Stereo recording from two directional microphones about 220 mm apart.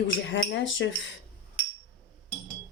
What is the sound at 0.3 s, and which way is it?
Speech, 55° left (ahead or behind).